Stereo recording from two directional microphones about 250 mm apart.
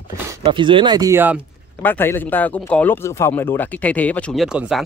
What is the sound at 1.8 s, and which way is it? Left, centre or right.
Speech, centre.